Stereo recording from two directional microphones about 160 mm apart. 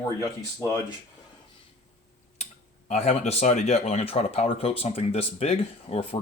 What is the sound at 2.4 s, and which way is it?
Speech, 45° left (ahead or behind).